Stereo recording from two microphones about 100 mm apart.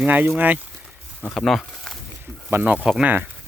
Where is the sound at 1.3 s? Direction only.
Centre (ahead or behind).